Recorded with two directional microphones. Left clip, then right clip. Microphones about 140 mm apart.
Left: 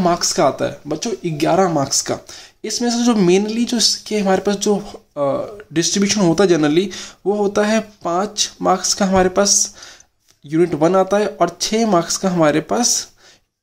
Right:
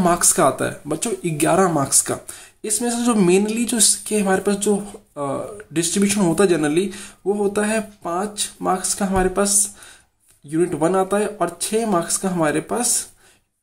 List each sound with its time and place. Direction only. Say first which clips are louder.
0.0 s speech: left 1 dB; 5° left (ahead or behind); by 12.8 s 25° left (ahead or behind)